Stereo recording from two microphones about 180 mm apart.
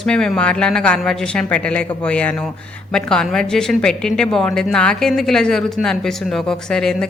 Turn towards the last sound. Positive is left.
turn(degrees=5)  # may be behind; listen again after turning